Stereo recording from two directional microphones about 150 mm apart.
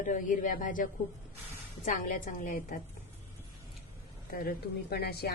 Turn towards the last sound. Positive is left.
turn(degrees=90)